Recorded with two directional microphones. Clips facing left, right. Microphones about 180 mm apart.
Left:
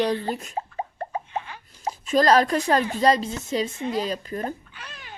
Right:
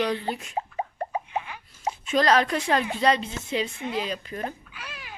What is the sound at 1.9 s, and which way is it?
Speech, 40° left (ahead or behind).